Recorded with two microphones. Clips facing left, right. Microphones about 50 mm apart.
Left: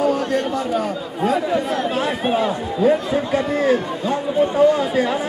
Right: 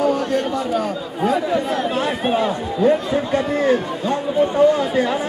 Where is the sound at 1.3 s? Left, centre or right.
Centre.